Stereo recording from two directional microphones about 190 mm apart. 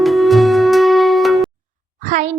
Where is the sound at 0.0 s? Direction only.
Centre (ahead or behind).